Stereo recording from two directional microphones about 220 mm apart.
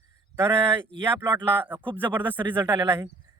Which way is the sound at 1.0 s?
10° right (ahead or behind).